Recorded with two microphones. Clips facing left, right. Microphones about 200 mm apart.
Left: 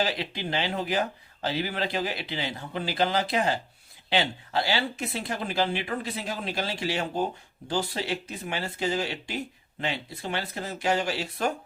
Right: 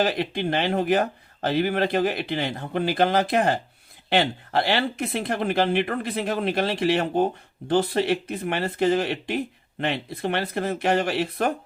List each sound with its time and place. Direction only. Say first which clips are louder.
0.0 s speech: right 6 dB; 55° right (ahead or behind)